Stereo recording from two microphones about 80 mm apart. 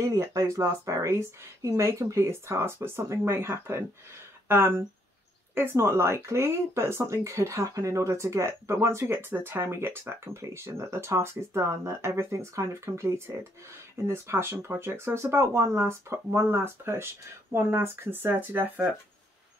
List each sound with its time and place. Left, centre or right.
0.1 s speech: right